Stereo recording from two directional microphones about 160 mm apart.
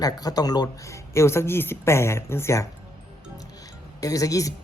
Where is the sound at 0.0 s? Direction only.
25° left (ahead or behind).